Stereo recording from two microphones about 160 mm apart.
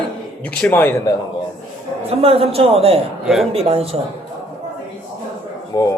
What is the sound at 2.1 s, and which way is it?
Speech, 40° right (ahead or behind).